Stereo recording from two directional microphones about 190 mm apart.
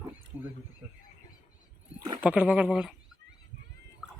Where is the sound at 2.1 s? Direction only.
10° right (ahead or behind).